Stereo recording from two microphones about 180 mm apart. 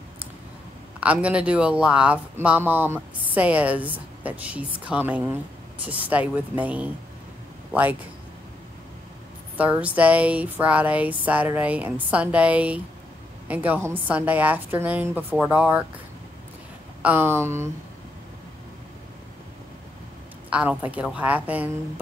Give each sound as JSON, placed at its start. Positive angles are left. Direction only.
{"t": 1.0, "sound": "speech", "side_deg": -5}
{"t": 9.6, "sound": "speech", "side_deg": -10}
{"t": 17.0, "sound": "speech", "side_deg": -10}
{"t": 20.4, "sound": "speech", "side_deg": -5}